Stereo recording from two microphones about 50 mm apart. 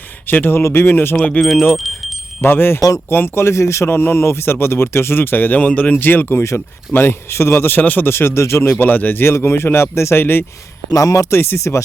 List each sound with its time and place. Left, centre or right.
0.3 s speech: left
0.6 s speech: left
1.4 s speech: centre
1.7 s a sound: centre
2.4 s speech: left
3.8 s speech: left
6.9 s speech: left
7.8 s speech: left
8.8 s speech: left
9.2 s speech: left
11.0 s speech: left
11.3 s speech: left